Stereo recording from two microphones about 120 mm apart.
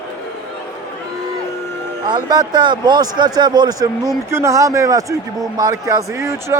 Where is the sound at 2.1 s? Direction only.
35° right (ahead or behind).